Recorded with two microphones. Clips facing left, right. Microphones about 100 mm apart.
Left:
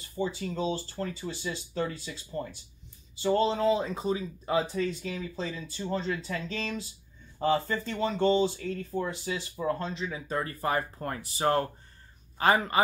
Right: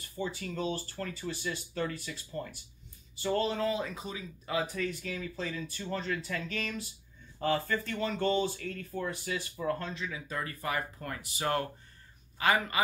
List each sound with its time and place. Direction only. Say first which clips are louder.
0.2 s a man's voice: left 4 dB; 20° left (ahead or behind)